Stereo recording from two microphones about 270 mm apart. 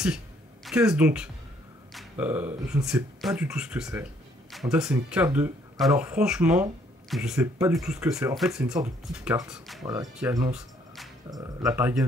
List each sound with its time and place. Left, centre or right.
0.8 s speech: centre
11.2 s speech: centre